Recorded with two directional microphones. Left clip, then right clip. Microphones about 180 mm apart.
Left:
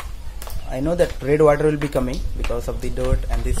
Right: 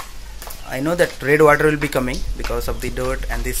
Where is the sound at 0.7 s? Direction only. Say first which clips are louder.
Right 2 dB; centre (ahead or behind).